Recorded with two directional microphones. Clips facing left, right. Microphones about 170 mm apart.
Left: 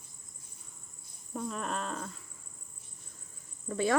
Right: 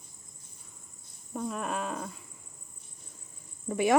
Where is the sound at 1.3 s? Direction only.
5° right (ahead or behind).